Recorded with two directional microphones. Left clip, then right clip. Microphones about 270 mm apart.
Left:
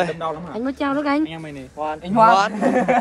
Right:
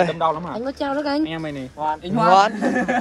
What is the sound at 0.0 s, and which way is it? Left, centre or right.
Speech, centre.